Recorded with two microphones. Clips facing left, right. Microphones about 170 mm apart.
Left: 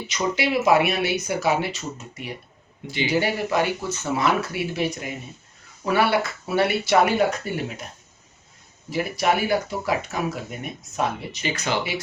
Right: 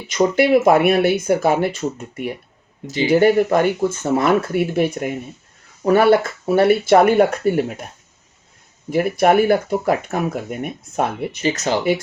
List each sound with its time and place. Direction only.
0.1 s speech: 50° right (ahead or behind)
2.8 s speech: 40° right (ahead or behind)
8.9 s speech: 50° right (ahead or behind)
11.4 s speech: 40° right (ahead or behind)